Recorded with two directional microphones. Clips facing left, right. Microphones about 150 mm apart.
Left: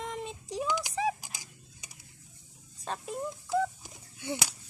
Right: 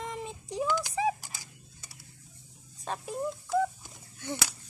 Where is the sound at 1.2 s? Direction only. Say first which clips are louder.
Even; 15° left (ahead or behind).